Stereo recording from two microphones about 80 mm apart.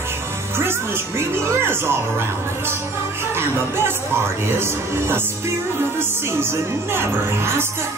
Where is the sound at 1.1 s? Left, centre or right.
Right.